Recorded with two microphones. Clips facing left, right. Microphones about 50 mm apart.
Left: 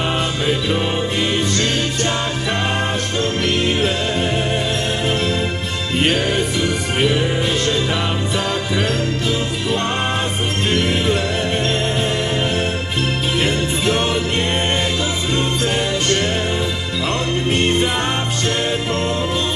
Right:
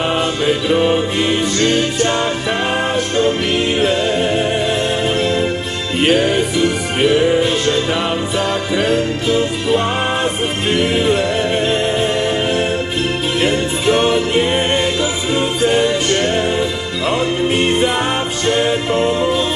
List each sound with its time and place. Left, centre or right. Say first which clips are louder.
0.0 s music: right 4 dB; centre